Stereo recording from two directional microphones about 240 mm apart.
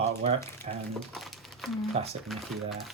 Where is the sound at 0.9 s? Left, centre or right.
Centre.